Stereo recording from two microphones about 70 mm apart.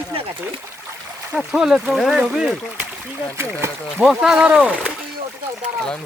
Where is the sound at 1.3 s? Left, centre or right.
Centre.